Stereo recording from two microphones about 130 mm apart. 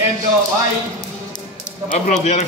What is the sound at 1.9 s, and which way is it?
Speech, 65° left (ahead or behind).